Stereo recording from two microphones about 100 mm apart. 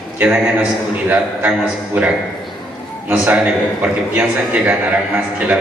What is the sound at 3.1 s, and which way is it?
A man's voice, 15° right (ahead or behind).